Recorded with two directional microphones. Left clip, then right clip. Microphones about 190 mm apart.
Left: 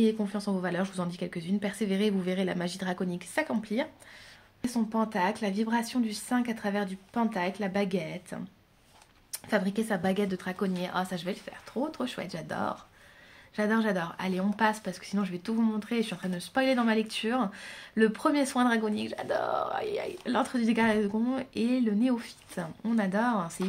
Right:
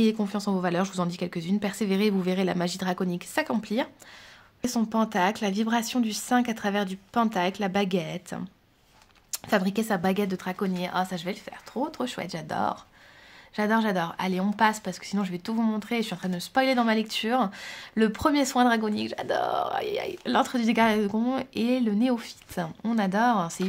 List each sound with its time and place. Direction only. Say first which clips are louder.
0.0 s speech: right 2 dB; 45° right (ahead or behind)